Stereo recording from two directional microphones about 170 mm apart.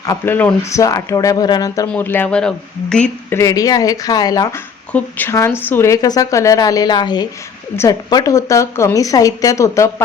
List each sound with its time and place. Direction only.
0.0 s a woman's voice: 15° left (ahead or behind)
4.9 s a woman's voice: 10° left (ahead or behind)